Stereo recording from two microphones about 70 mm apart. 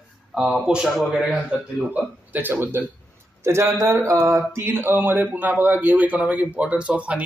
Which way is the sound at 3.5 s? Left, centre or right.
Right.